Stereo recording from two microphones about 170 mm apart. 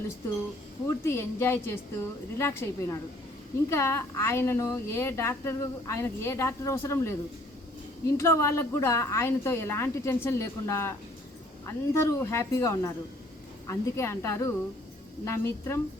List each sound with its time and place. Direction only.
0.9 s a woman's voice: 15° left (ahead or behind)